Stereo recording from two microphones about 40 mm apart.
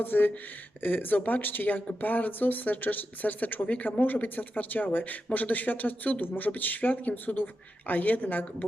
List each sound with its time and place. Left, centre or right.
0.0 s speech: left